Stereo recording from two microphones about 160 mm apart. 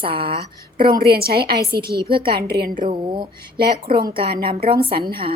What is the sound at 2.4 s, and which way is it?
Speech, 80° right.